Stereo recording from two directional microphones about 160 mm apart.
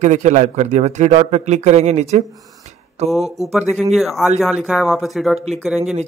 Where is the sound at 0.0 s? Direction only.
45° right (ahead or behind).